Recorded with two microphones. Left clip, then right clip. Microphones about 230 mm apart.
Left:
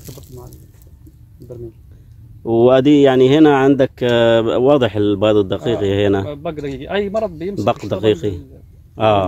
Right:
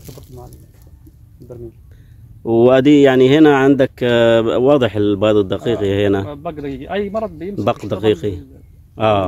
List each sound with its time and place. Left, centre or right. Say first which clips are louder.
0.0 s a sound: even; centre
1.4 s speech: left 1 dB; centre
2.4 s speech: even; centre
6.2 s a man's voice: left 1 dB; left
7.6 s speech: even; centre